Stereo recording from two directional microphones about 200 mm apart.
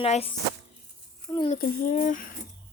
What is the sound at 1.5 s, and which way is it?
Speech, 40° left (ahead or behind).